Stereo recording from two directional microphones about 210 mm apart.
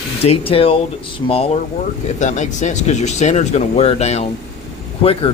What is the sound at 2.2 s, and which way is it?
A man's voice, 35° left (ahead or behind).